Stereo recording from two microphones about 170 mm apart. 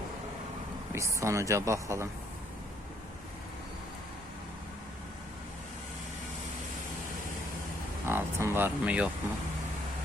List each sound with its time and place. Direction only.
0.9 s speech: 15° right (ahead or behind)
8.0 s speech: 15° right (ahead or behind)